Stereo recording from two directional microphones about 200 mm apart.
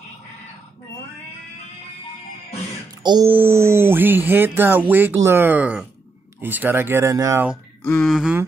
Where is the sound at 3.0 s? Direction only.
20° right (ahead or behind).